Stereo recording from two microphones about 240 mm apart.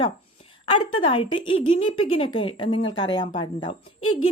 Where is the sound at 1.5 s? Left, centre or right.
Left.